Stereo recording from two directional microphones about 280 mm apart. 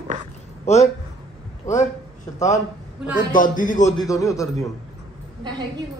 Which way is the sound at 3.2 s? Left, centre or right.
Left.